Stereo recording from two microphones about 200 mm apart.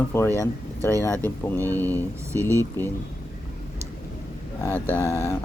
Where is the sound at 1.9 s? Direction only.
15° right (ahead or behind).